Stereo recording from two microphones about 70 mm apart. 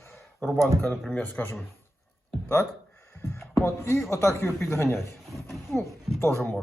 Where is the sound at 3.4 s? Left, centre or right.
Left.